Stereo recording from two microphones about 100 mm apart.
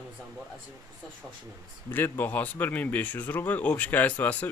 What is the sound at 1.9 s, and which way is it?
Speech, 20° left (ahead or behind).